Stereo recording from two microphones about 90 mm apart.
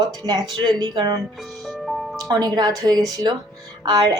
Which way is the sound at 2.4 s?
50° right (ahead or behind).